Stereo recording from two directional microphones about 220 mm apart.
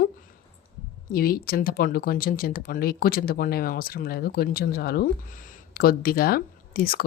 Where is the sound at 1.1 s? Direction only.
45° left (ahead or behind).